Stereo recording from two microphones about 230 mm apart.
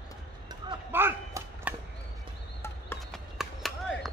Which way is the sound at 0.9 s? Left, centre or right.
Centre.